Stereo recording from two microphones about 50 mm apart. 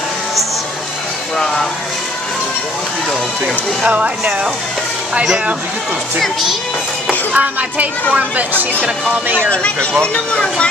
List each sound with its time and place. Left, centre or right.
3.8 s speech: right
6.1 s speech: centre
7.3 s speech: right
8.8 s speech: centre
9.5 s speech: left